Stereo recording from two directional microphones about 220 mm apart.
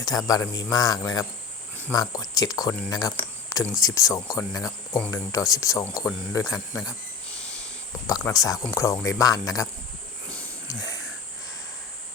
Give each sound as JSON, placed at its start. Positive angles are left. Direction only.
{"t": 0.0, "sound": "speech", "side_deg": 15}
{"t": 8.0, "sound": "speech", "side_deg": 15}
{"t": 10.2, "sound": "a sound", "side_deg": 5}